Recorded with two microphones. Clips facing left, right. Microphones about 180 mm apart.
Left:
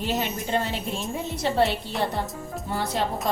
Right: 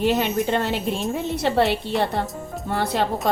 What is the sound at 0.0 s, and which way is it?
Speech, 70° right (ahead or behind).